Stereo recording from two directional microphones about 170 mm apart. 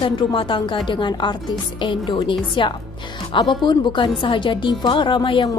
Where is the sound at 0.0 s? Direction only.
30° left (ahead or behind).